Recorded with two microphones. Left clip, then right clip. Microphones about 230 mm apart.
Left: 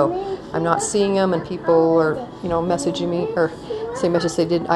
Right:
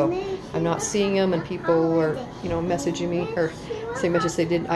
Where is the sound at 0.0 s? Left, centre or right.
Centre.